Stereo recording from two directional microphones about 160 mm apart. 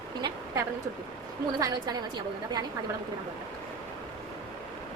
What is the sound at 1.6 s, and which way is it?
Speech, 20° right (ahead or behind).